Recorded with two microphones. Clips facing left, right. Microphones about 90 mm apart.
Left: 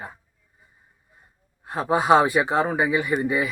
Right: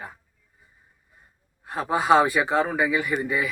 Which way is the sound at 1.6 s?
25° left (ahead or behind).